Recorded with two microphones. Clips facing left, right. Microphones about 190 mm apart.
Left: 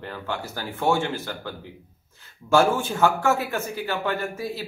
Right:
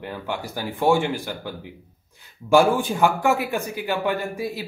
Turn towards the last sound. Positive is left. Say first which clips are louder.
# right 2 dB
turn(degrees=-15)  # may be behind; listen again after turning